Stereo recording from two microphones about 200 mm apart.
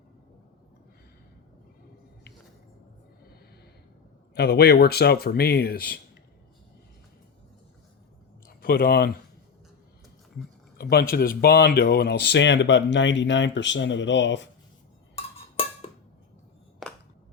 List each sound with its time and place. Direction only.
4.4 s speech: 55° left (ahead or behind)
8.4 s speech: 45° left (ahead or behind)
10.8 s a sound: 50° left (ahead or behind)
11.1 s speech: 45° left (ahead or behind); by 14.5 s 65° left (ahead or behind)
15.1 s cowbell: 30° left (ahead or behind)
16.8 s a sound: centre (ahead or behind)